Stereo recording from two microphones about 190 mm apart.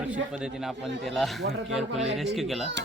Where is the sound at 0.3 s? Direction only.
5° right (ahead or behind).